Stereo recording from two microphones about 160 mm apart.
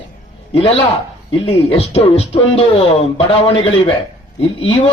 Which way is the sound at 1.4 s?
35° left (ahead or behind).